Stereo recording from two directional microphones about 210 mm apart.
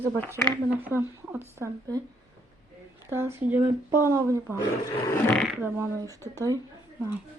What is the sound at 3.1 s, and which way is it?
Speech, 10° right (ahead or behind).